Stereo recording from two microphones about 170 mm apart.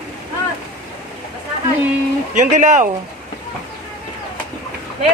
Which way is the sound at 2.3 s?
45° right (ahead or behind).